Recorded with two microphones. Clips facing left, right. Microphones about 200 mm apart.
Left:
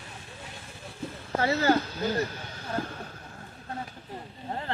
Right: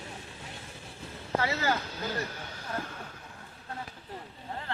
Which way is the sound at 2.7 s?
30° left (ahead or behind).